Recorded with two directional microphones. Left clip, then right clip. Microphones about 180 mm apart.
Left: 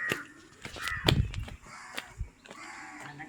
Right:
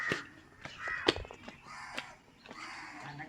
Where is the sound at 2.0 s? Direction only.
50° left (ahead or behind).